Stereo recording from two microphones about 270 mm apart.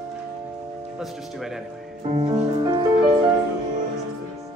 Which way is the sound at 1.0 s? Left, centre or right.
Centre.